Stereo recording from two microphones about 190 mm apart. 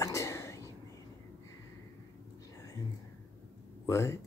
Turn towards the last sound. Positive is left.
turn(degrees=15)  # may be behind; listen again after turning